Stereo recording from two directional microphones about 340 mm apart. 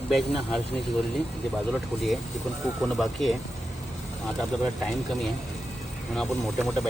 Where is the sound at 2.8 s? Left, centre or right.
Centre.